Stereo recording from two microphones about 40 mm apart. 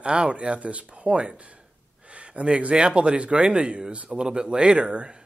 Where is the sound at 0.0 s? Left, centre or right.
Right.